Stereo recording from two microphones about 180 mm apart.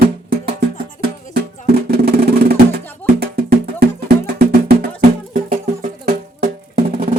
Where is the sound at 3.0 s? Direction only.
60° right (ahead or behind).